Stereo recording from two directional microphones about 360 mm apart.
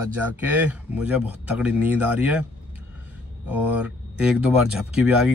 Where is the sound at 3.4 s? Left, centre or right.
Centre.